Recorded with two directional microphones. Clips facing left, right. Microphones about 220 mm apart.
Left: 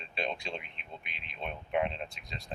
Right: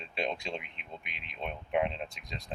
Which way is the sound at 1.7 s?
10° right (ahead or behind).